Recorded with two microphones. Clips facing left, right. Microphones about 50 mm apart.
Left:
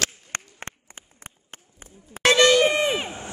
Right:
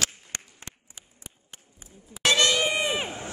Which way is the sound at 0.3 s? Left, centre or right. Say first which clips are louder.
Left 8 dB; left.